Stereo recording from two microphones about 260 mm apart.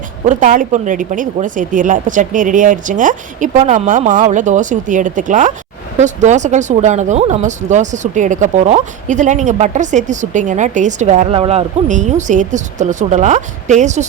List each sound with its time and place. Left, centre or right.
0.3 s speech: right